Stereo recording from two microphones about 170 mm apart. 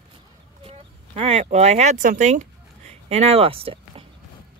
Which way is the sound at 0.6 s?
35° right (ahead or behind).